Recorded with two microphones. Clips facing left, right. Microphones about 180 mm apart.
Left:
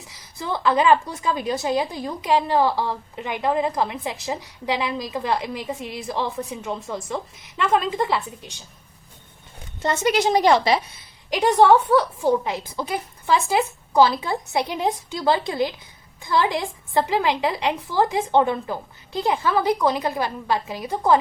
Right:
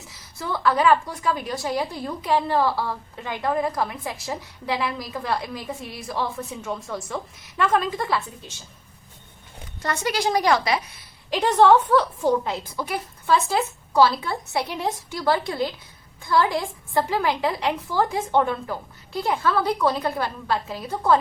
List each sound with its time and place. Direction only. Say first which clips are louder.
0.1 s a woman's voice: left 2 dB; 15° left (ahead or behind)
9.8 s a woman's voice: left 4 dB; 20° left (ahead or behind)
11.3 s a woman's voice: left 1 dB; 15° left (ahead or behind)